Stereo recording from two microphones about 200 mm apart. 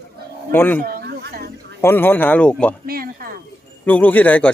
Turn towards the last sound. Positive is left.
turn(degrees=10)  # may be behind; listen again after turning